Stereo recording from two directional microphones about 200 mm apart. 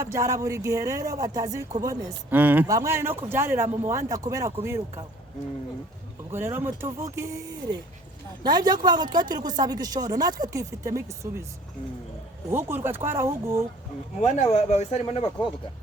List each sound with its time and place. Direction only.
0.0 s speech: 15° right (ahead or behind)
6.3 s speech: 10° right (ahead or behind)
12.5 s speech: 10° right (ahead or behind)
14.2 s speech: 30° left (ahead or behind)